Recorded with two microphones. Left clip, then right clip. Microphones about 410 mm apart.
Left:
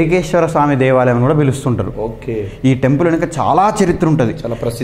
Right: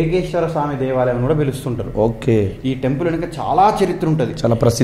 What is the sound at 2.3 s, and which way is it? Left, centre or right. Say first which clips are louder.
Speech: right 4 dB; right.